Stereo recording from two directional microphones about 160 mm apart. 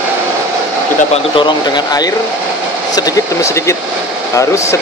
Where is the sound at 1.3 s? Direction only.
30° left (ahead or behind).